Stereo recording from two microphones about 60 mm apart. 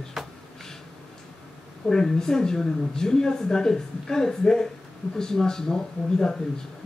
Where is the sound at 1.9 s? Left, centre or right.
Centre.